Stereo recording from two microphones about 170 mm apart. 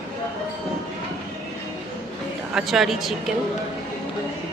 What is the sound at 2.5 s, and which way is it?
Speech, centre (ahead or behind).